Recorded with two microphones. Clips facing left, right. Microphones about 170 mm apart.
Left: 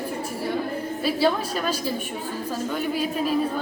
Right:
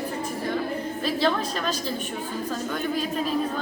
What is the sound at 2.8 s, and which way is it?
Speech, 10° left (ahead or behind).